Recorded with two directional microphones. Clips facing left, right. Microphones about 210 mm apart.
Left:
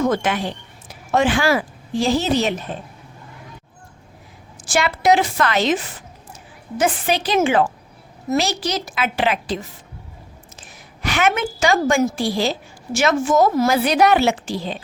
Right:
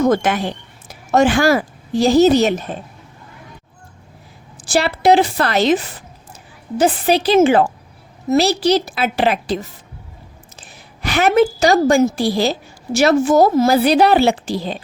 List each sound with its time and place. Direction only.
0.0 s a woman's voice: 40° right (ahead or behind)
4.5 s a woman's voice: 35° right (ahead or behind)